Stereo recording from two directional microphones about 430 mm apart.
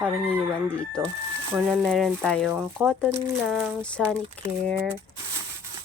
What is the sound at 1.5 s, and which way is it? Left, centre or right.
Speech, centre.